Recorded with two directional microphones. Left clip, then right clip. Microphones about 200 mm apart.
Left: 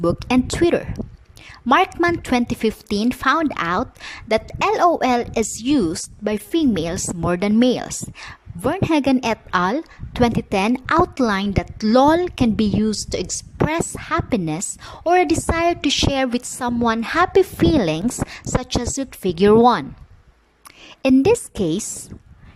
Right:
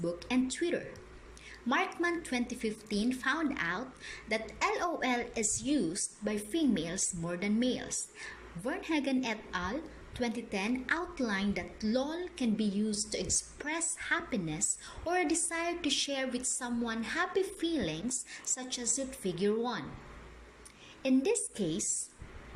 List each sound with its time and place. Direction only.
0.0 s a woman's voice: 55° left (ahead or behind)
21.0 s a woman's voice: 55° left (ahead or behind)